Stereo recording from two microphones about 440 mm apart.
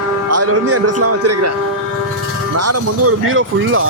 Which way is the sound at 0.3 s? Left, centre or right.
Right.